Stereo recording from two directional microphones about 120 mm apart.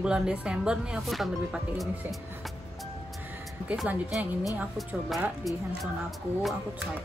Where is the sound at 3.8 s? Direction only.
10° right (ahead or behind).